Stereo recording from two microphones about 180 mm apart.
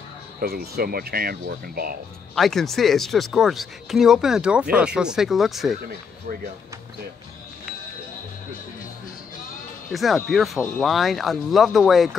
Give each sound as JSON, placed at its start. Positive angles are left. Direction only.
{"t": 0.4, "sound": "speech", "side_deg": -55}
{"t": 2.3, "sound": "speech", "side_deg": 0}
{"t": 9.9, "sound": "speech", "side_deg": 0}